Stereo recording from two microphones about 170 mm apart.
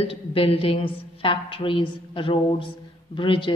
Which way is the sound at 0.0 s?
35° left (ahead or behind).